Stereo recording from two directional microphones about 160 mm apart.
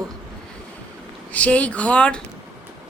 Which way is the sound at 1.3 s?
10° left (ahead or behind).